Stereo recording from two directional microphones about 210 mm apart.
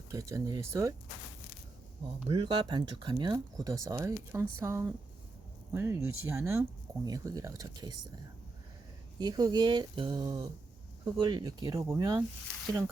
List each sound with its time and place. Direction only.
0.1 s speech: 15° right (ahead or behind)
2.3 s speech: 25° right (ahead or behind)
9.1 s speech: 20° right (ahead or behind)